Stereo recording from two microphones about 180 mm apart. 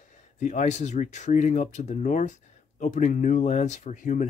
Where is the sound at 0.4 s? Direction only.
45° left (ahead or behind).